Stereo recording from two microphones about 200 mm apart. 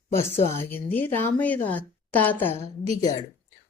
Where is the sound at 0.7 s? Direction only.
10° left (ahead or behind).